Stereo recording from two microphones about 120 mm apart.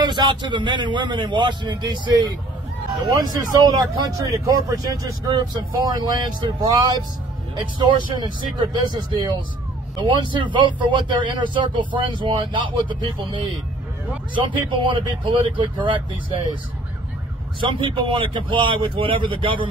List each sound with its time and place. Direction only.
0.0 s speech: 40° right (ahead or behind)
17.6 s speech: 45° right (ahead or behind)